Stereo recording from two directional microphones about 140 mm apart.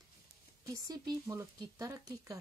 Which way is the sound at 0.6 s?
25° right (ahead or behind).